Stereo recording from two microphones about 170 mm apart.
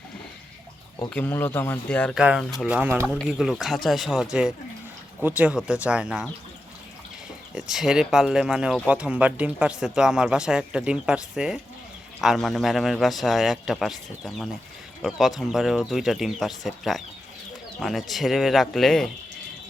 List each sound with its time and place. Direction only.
1.1 s speech: 10° left (ahead or behind)
2.1 s speech: 5° right (ahead or behind)
7.5 s speech: centre (ahead or behind)